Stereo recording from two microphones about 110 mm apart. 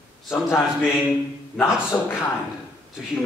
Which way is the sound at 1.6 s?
20° left (ahead or behind).